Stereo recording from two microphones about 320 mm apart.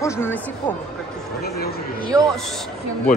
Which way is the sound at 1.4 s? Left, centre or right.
Left.